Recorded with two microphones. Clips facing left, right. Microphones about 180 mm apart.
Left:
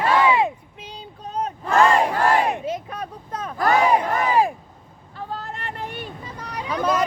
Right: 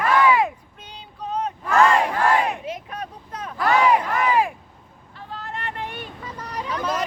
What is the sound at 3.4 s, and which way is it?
Crowd, 40° left (ahead or behind).